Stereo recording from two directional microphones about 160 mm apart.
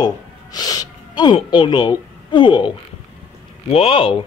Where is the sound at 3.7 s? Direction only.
35° left (ahead or behind).